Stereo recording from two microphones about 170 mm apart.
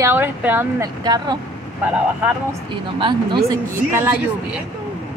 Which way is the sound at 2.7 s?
30° right (ahead or behind).